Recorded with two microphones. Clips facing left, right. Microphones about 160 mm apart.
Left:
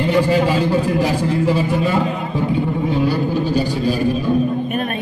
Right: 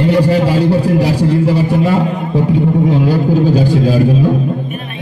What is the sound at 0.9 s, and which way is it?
A man's voice, 70° right (ahead or behind).